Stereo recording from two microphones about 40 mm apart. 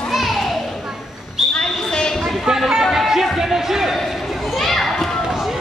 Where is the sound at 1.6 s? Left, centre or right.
Centre.